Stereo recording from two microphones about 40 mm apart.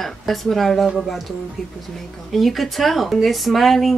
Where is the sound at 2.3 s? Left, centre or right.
Centre.